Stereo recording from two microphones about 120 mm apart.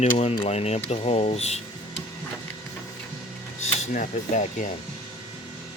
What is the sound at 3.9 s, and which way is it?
Speech, 90° left.